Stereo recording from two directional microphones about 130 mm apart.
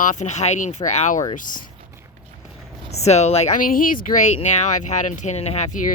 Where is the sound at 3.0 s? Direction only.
55° left (ahead or behind).